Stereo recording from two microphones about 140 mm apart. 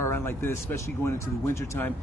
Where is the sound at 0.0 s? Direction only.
15° left (ahead or behind).